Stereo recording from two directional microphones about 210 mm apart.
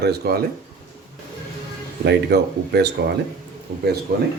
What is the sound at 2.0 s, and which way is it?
Speech, 55° right (ahead or behind).